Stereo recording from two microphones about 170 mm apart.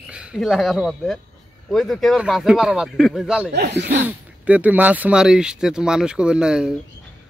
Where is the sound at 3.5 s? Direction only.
85° right.